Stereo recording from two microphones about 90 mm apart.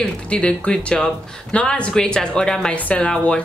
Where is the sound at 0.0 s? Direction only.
10° left (ahead or behind).